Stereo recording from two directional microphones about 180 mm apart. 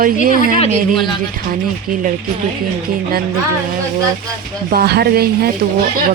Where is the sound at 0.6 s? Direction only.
30° left (ahead or behind).